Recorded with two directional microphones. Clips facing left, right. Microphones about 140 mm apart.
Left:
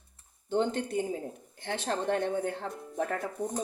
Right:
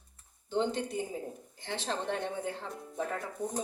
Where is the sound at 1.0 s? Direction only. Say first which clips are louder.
Left 4 dB; 60° left (ahead or behind).